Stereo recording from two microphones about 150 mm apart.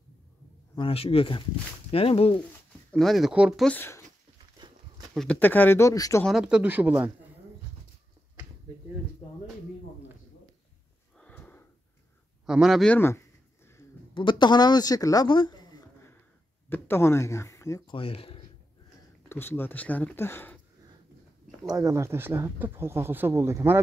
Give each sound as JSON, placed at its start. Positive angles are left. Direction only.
{"t": 0.7, "sound": "speech", "side_deg": 40}
{"t": 2.9, "sound": "speech", "side_deg": 0}
{"t": 3.6, "sound": "speech", "side_deg": 15}
{"t": 4.6, "sound": "a sound", "side_deg": -30}
{"t": 5.1, "sound": "speech", "side_deg": 5}
{"t": 6.2, "sound": "speech", "side_deg": -5}
{"t": 11.1, "sound": "sniff", "side_deg": 10}
{"t": 12.4, "sound": "speech", "side_deg": -5}
{"t": 12.9, "sound": "speech", "side_deg": 15}
{"t": 14.1, "sound": "speech", "side_deg": 30}
{"t": 16.6, "sound": "speech", "side_deg": 15}
{"t": 17.8, "sound": "speech", "side_deg": 35}
{"t": 19.2, "sound": "speech", "side_deg": 15}
{"t": 21.6, "sound": "speech", "side_deg": -20}